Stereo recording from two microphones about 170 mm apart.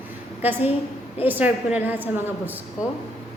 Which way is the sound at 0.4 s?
10° right (ahead or behind).